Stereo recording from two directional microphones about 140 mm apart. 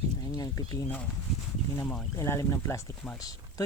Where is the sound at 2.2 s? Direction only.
20° left (ahead or behind).